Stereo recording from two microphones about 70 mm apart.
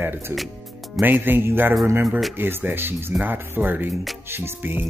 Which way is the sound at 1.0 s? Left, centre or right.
Right.